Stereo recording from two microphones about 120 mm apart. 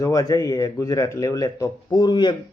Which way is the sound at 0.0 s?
30° left (ahead or behind).